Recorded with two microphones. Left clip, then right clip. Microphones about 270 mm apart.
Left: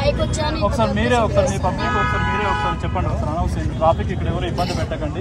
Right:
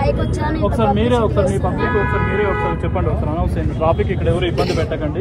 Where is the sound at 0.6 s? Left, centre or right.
Left.